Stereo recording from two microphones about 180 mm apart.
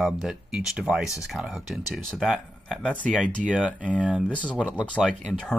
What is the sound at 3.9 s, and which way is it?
Speech, 5° right (ahead or behind).